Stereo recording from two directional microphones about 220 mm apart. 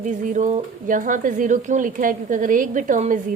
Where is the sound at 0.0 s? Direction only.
35° right (ahead or behind).